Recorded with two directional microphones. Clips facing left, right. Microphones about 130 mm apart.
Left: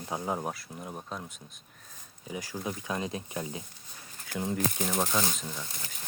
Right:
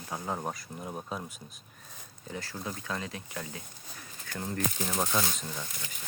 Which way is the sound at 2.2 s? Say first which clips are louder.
Left 3 dB; 10° left (ahead or behind).